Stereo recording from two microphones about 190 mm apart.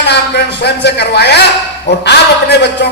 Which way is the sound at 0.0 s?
60° left (ahead or behind).